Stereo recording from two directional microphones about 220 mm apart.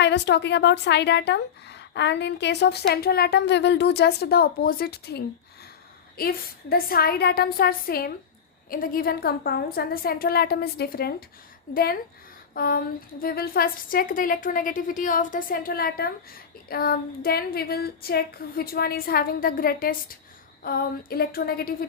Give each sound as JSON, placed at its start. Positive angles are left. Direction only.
{"t": 0.0, "sound": "a woman's voice", "side_deg": 50}